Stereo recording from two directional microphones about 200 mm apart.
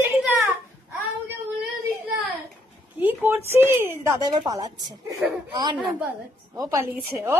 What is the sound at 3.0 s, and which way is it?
Speech, 10° right (ahead or behind).